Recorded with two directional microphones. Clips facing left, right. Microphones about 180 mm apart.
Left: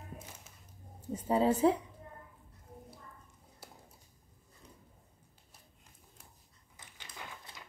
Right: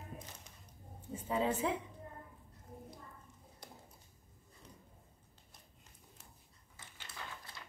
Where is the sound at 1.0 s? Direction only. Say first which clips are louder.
Left 6 dB; 40° left (ahead or behind).